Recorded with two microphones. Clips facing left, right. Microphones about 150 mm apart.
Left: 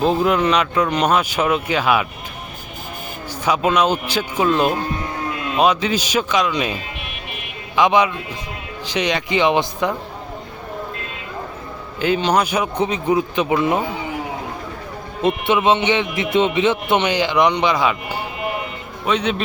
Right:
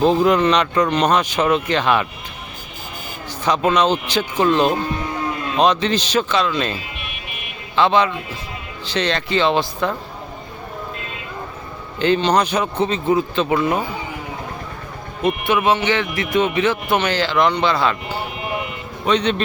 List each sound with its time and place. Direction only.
0.0 s speech: 5° left (ahead or behind)
3.4 s speech: 10° left (ahead or behind)
7.8 s speech: 15° left (ahead or behind)
11.9 s speech: 5° left (ahead or behind)
15.2 s speech: 25° left (ahead or behind); by 19.4 s 5° left (ahead or behind)